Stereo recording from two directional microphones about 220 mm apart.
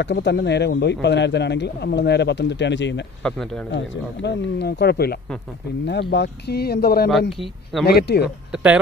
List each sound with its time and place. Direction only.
0.0 s speech: 50° left (ahead or behind)
3.2 s speech: centre (ahead or behind)
3.7 s speech: 55° left (ahead or behind)